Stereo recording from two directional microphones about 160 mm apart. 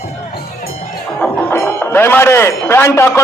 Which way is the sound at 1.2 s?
10° left (ahead or behind).